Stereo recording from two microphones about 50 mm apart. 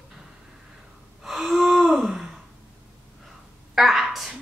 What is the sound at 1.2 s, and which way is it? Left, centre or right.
Gasp, centre.